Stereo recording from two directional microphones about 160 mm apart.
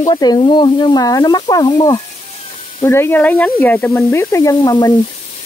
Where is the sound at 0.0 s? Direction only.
25° left (ahead or behind).